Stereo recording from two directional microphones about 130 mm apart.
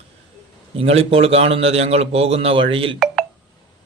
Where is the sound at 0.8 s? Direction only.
50° right (ahead or behind).